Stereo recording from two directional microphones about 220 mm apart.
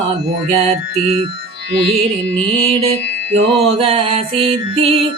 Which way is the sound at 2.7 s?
30° right (ahead or behind).